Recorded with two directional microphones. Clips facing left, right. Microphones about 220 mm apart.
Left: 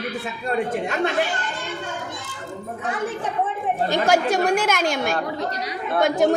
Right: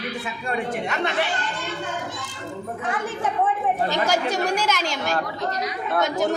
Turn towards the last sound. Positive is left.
turn(degrees=55)  # may be behind; listen again after turning